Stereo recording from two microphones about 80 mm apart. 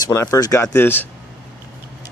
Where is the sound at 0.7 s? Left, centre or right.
Left.